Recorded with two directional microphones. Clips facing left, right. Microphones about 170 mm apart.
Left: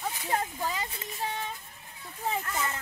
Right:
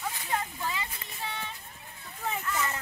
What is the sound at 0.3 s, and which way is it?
Speech, 40° left (ahead or behind).